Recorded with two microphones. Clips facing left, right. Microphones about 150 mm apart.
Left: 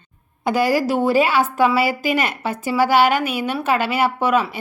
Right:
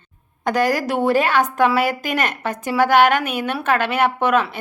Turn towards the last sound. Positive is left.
turn(degrees=10)  # may be behind; listen again after turning